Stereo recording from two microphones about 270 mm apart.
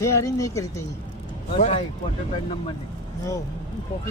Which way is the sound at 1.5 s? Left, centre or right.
Left.